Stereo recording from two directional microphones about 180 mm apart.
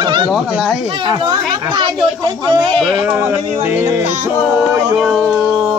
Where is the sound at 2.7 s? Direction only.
Centre (ahead or behind).